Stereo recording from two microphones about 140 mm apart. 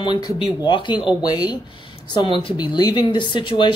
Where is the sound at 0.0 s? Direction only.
35° left (ahead or behind).